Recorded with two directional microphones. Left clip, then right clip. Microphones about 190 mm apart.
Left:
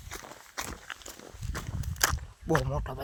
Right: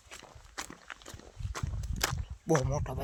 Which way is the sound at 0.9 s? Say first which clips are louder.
Left 4 dB; 45° left (ahead or behind).